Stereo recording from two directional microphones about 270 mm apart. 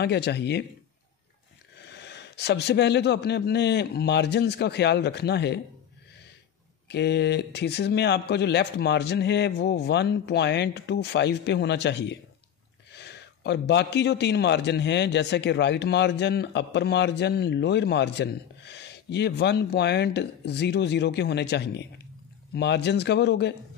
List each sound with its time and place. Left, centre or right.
0.0 s a man's voice: left
1.9 s a man's voice: left
6.9 s a man's voice: left